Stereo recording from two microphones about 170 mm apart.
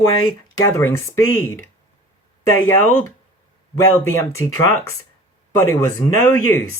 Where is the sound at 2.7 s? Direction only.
15° left (ahead or behind).